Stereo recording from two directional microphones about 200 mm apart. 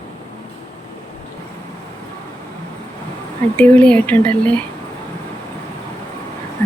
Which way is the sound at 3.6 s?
5° left (ahead or behind).